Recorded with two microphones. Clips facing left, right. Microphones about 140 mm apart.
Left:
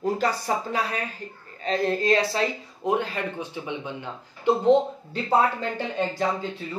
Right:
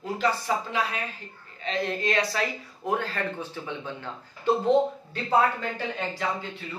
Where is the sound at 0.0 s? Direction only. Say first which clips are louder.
Left 2 dB; 40° left (ahead or behind); by 4.1 s 15° left (ahead or behind).